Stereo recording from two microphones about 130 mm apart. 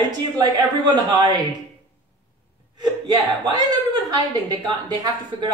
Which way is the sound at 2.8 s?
35° right (ahead or behind).